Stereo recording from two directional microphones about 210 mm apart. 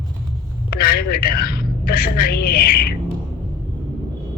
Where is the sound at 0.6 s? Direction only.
45° left (ahead or behind).